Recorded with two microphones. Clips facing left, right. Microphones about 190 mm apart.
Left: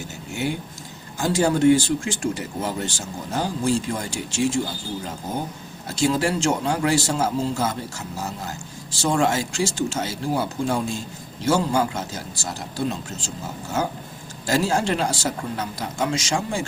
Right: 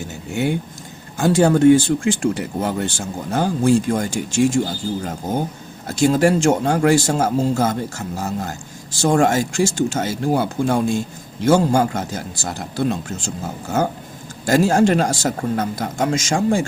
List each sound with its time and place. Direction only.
1.2 s speech: 55° right (ahead or behind)
6.0 s speech: 50° right (ahead or behind)